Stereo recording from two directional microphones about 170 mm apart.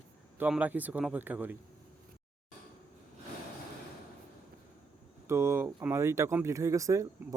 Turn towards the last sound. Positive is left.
turn(degrees=-20)  # may be behind; listen again after turning